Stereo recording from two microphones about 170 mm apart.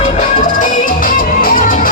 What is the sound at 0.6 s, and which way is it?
Music, 55° left (ahead or behind).